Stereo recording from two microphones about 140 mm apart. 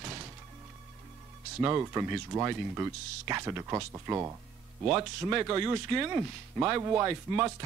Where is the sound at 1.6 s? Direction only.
20° right (ahead or behind).